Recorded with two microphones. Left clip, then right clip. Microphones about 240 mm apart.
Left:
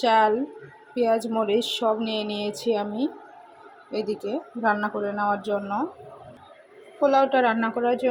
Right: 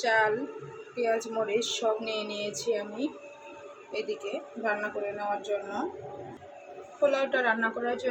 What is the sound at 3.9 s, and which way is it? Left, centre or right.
Speech, left.